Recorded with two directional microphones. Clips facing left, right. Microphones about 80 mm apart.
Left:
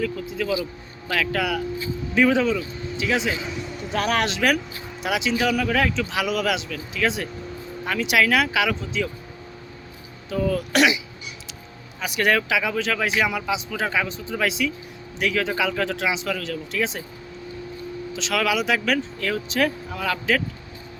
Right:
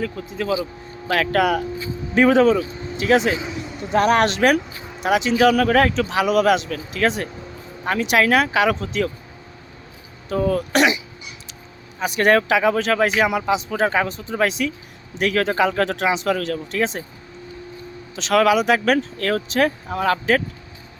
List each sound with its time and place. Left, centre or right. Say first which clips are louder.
0.0 s speech: even; right
3.3 s a sound: right 2 dB; centre
4.2 s speech: right 5 dB; right
5.3 s speech: right 7 dB; right
8.7 s speech: right 4 dB; right
10.2 s speech: right 3 dB; right
11.9 s speech: right 5 dB; right
18.3 s speech: right 7 dB; right